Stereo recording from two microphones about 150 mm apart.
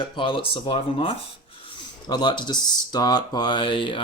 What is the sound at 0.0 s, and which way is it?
Speech, 35° left (ahead or behind).